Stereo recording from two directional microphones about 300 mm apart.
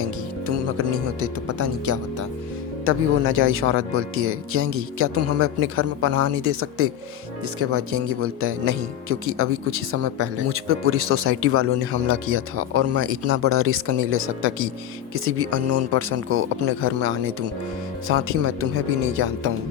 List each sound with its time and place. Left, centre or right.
0.4 s music: right
1.2 s speech: right
2.8 s speech: right